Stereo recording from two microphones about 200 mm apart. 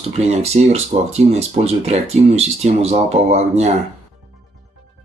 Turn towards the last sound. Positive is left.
turn(degrees=-35)  # may be behind; listen again after turning